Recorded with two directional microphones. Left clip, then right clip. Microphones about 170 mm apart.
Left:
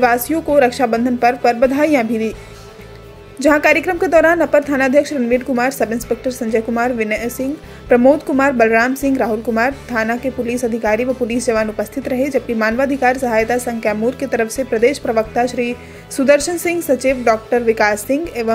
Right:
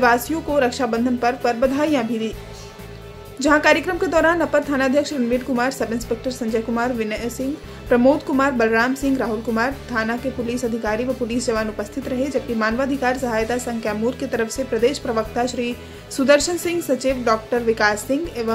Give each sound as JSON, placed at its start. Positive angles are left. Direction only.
{"t": 0.0, "sound": "a woman's voice", "side_deg": 20}
{"t": 3.3, "sound": "a woman's voice", "side_deg": 20}